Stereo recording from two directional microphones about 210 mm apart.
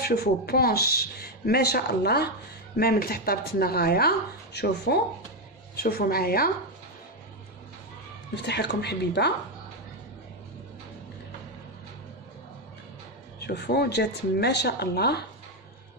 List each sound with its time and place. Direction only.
0.0 s speech: 45° left (ahead or behind)
8.4 s speech: 55° left (ahead or behind)
13.4 s speech: 50° left (ahead or behind)